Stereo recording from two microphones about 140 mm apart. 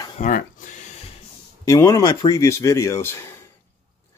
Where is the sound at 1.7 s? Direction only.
20° left (ahead or behind).